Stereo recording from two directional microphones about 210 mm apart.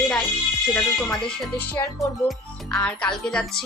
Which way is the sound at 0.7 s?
5° left (ahead or behind).